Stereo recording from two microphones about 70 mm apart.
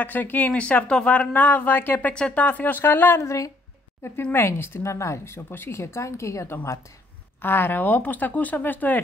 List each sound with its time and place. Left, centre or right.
0.0 s speech: left
3.2 s a woman's voice: left
4.3 s speech: left
7.4 s speech: left